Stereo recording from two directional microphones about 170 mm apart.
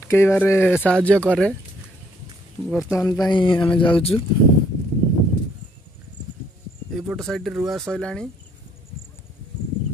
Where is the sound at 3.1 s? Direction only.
25° left (ahead or behind).